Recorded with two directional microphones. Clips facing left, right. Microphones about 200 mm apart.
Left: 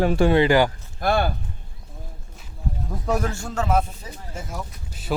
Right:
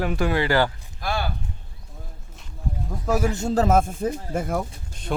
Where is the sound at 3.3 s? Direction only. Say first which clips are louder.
Right 8 dB; 20° right (ahead or behind).